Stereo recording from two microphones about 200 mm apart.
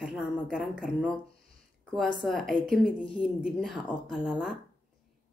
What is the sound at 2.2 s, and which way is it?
A woman's voice, centre (ahead or behind).